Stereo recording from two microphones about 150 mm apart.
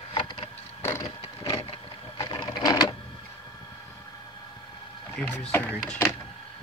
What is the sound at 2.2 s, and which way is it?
Sewing machine, 25° left (ahead or behind).